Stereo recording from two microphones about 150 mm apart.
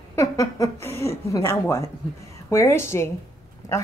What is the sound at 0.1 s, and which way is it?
A woman's voice, 20° left (ahead or behind).